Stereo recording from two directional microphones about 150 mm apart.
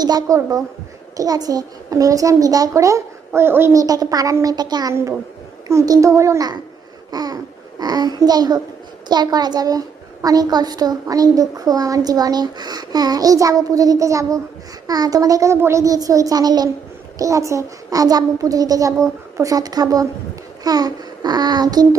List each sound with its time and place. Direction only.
0.0 s a woman's voice: 25° right (ahead or behind)
7.1 s babbling: 25° right (ahead or behind)
7.8 s a woman's voice: 25° right (ahead or behind)